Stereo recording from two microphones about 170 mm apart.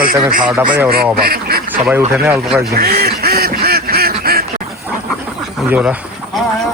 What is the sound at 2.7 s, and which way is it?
Quack, 60° right (ahead or behind).